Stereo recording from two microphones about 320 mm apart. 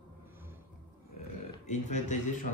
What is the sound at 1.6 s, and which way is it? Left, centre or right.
Speech, left.